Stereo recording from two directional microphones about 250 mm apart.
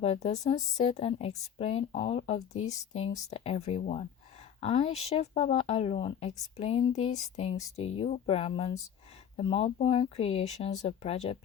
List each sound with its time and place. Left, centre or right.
0.0 s speech: left